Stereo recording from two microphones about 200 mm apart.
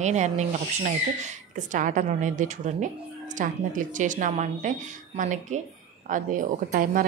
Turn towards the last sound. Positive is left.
turn(degrees=-45)  # may be behind; listen again after turning